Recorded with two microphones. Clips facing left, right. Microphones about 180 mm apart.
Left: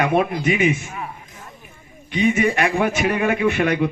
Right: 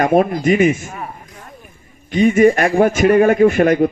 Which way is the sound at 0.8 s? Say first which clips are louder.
Right 2 dB; 40° right (ahead or behind).